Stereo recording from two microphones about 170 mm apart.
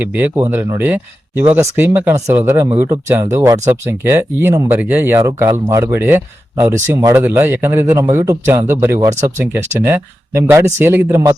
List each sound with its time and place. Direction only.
0.0 s speech: 10° right (ahead or behind)